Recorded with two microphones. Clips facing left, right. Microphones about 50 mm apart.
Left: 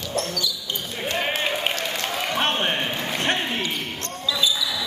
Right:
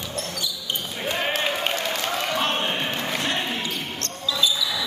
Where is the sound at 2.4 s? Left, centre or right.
Left.